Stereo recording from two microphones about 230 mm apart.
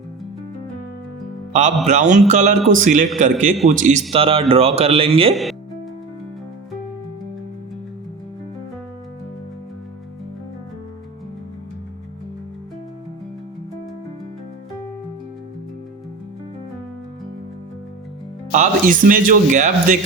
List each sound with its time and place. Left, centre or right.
1.9 s speech: right
5.3 s speech: centre
18.5 s speech: right